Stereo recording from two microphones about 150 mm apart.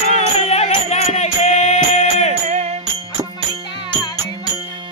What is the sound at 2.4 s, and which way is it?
Music, 50° right (ahead or behind).